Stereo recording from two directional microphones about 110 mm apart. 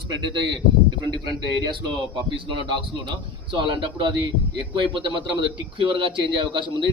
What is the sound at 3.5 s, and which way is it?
A man's voice, 45° right (ahead or behind).